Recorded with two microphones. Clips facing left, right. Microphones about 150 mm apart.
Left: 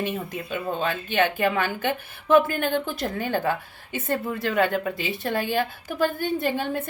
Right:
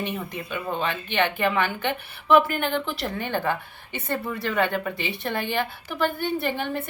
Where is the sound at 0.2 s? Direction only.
45° left (ahead or behind).